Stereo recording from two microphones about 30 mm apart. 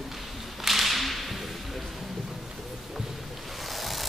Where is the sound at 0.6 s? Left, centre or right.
Centre.